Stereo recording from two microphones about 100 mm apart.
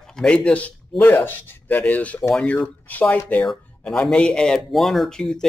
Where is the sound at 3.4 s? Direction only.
5° left (ahead or behind).